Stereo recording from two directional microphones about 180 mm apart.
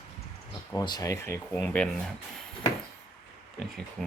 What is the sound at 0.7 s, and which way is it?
Speech, 20° left (ahead or behind).